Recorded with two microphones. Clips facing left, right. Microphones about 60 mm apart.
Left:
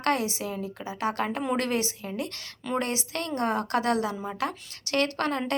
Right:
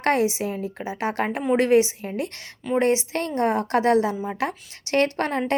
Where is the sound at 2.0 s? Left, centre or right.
Right.